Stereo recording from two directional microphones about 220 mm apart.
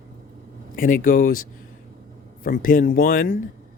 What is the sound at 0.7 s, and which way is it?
Speech, 40° left (ahead or behind).